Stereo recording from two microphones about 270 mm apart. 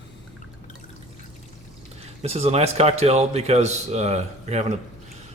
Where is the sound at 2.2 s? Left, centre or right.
Right.